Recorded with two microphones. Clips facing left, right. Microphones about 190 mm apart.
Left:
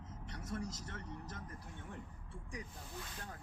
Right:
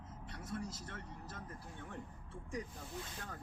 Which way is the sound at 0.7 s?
55° right (ahead or behind).